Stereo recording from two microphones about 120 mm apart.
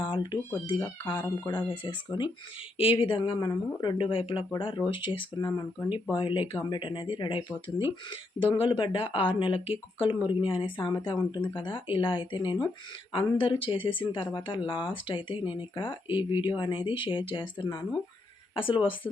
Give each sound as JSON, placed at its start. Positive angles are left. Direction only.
{"t": 0.0, "sound": "speech", "side_deg": 40}